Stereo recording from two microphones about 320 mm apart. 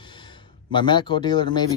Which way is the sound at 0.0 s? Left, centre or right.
Centre.